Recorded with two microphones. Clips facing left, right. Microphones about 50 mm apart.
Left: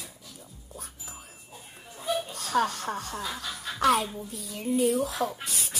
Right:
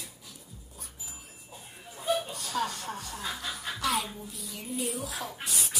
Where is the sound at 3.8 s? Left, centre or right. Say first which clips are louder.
Left 8 dB; left.